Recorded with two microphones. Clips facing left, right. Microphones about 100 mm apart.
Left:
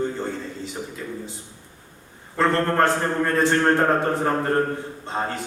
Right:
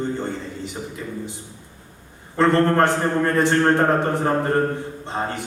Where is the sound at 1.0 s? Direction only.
10° right (ahead or behind).